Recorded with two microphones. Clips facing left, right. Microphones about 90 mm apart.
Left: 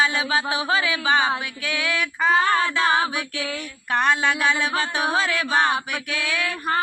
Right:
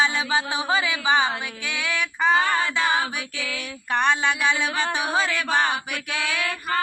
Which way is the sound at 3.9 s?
5° left (ahead or behind).